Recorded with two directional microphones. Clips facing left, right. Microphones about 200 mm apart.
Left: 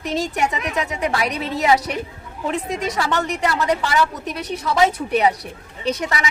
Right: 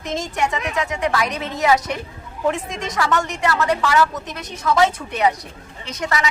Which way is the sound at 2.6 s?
35° left (ahead or behind).